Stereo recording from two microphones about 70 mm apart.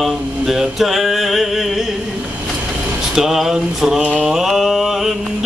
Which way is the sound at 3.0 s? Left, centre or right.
Centre.